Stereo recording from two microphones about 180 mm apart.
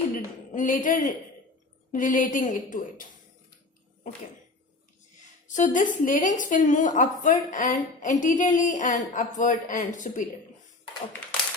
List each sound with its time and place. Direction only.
0.1 s a sound: 50° left (ahead or behind)
1.9 s a woman's voice: 50° left (ahead or behind)
5.5 s a woman's voice: 45° left (ahead or behind)